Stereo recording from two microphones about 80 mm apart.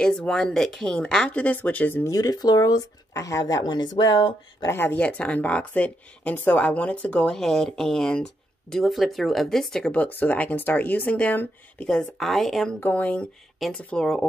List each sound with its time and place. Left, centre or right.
0.0 s speech: centre
2.0 s speech: left
4.6 s speech: left
4.9 s speech: centre
7.3 s speech: centre
9.9 s speech: left
11.9 s speech: centre
12.8 s speech: centre
13.6 s speech: centre